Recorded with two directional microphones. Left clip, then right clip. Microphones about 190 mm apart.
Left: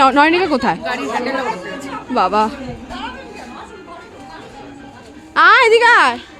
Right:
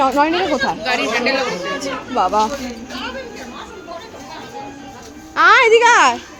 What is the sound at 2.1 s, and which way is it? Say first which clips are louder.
Speech: left 1 dB; 30° left (ahead or behind).